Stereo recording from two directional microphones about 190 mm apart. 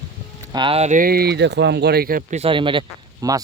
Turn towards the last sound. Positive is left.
turn(degrees=-20)  # may be behind; listen again after turning